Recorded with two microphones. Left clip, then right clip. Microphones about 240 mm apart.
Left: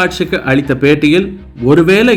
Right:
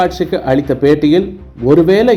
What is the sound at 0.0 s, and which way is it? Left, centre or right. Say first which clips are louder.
Speech: even; left.